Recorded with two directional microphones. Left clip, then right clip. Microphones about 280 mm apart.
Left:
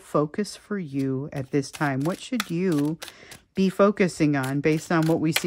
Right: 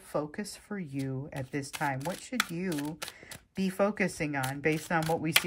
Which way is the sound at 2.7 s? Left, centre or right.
Centre.